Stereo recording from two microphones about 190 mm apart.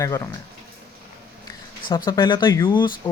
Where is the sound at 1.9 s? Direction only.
25° left (ahead or behind).